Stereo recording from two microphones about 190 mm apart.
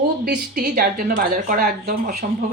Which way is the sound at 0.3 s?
55° right (ahead or behind).